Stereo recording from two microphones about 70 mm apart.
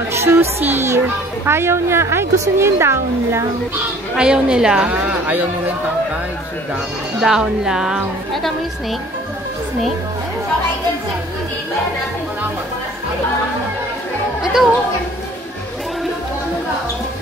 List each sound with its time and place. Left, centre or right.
0.1 s a child's voice: right
4.1 s speech: centre
7.2 s speech: centre
8.3 s a woman's voice: centre
14.4 s music: centre